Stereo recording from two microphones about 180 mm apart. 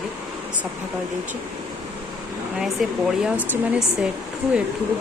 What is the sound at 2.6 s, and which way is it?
Speech, centre (ahead or behind).